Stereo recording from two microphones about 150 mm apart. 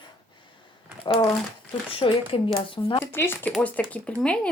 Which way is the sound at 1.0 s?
35° left (ahead or behind).